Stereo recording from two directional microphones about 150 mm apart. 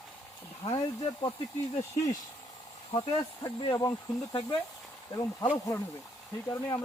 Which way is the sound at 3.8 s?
20° left (ahead or behind).